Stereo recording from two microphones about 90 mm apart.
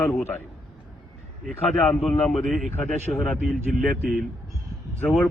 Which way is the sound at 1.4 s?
5° left (ahead or behind).